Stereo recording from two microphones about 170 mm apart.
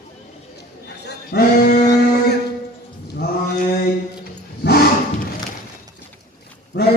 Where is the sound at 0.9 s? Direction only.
70° left (ahead or behind).